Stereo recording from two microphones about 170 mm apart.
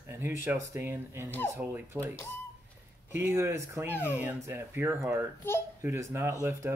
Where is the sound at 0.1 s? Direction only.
15° right (ahead or behind).